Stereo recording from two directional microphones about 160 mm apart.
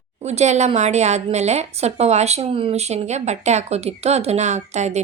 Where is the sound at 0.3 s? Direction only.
45° right (ahead or behind).